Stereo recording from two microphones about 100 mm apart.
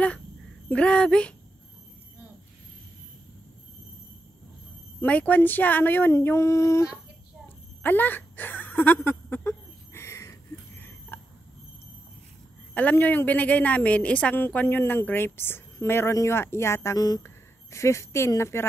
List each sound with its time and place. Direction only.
0.7 s speech: 10° left (ahead or behind)
5.0 s a woman's voice: 15° left (ahead or behind)
7.4 s a sound: 20° left (ahead or behind)
12.7 s a woman's voice: 15° left (ahead or behind)